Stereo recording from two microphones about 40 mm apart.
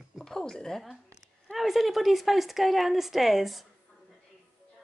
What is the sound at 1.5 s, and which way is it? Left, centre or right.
Speech, centre.